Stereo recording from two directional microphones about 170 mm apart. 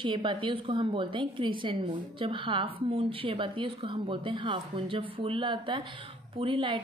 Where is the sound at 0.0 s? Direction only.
30° right (ahead or behind).